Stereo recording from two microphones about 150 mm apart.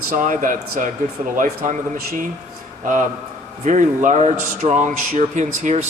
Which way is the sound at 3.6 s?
55° right (ahead or behind).